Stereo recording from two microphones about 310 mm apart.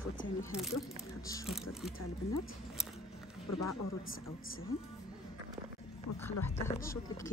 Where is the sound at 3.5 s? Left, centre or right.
Left.